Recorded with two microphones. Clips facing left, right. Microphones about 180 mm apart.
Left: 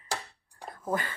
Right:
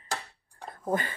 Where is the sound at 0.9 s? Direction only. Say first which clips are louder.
Right 2 dB; 20° right (ahead or behind).